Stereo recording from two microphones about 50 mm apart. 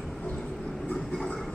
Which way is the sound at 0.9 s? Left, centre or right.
Left.